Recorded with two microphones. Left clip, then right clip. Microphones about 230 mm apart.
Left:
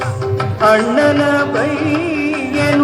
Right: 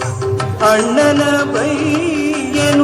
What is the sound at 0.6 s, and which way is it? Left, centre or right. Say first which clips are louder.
Music: even; right.